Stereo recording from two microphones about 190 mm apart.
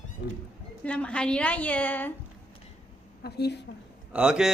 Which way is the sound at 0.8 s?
5° left (ahead or behind).